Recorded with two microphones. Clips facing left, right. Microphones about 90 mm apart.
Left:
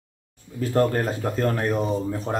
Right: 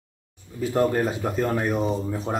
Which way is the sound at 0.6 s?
5° right (ahead or behind).